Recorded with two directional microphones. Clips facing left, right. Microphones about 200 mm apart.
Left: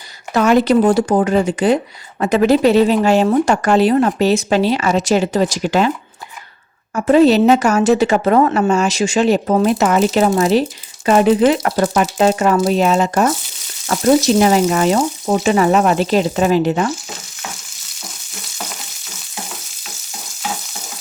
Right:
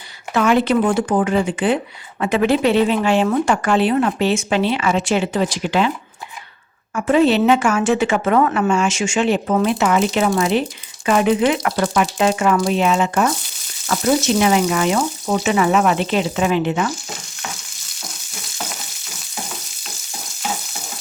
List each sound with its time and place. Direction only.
0.3 s a woman's voice: 40° left (ahead or behind)
6.9 s a woman's voice: 40° left (ahead or behind)